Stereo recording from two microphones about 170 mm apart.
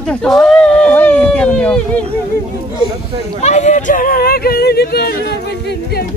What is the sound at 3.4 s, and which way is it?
Speech, 40° left (ahead or behind).